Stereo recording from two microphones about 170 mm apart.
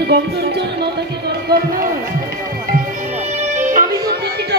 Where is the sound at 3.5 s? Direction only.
50° right (ahead or behind).